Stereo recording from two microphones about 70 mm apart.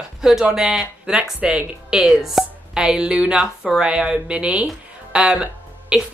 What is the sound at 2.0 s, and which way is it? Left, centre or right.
Speech, centre.